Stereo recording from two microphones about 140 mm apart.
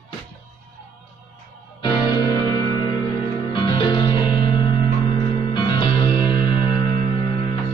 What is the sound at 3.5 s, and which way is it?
Music, 35° left (ahead or behind).